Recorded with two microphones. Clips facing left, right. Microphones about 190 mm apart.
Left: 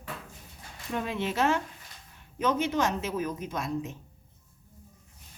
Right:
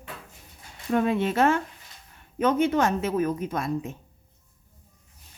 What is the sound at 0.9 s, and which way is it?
A woman's voice, 55° right (ahead or behind).